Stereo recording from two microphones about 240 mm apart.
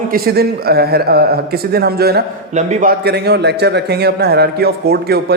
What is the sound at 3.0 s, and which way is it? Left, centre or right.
A man's voice, right.